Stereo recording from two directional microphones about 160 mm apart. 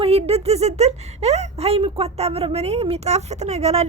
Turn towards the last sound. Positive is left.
turn(degrees=-40)  # may be behind; listen again after turning